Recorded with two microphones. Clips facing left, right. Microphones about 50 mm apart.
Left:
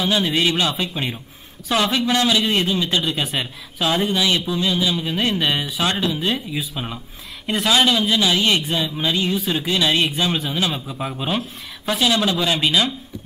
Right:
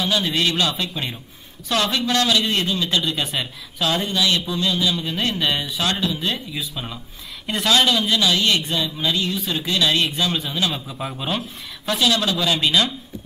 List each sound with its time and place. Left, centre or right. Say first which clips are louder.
0.0 s speech: left 2 dB; centre